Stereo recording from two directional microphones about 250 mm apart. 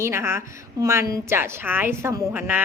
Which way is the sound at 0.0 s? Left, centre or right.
Centre.